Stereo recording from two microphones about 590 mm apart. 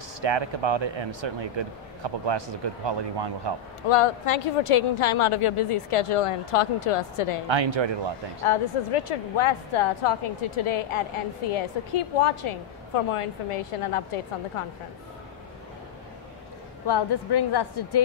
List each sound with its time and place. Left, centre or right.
0.2 s speech: right
3.9 s a woman's voice: left
7.4 s speech: right
8.5 s a woman's voice: left
16.8 s a woman's voice: left